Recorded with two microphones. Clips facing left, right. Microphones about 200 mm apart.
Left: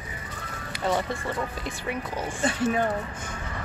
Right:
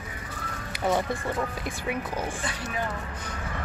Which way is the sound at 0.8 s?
15° right (ahead or behind).